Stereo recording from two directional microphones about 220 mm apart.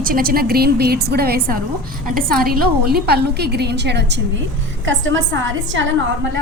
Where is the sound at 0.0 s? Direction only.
40° right (ahead or behind); by 5.8 s 60° right (ahead or behind).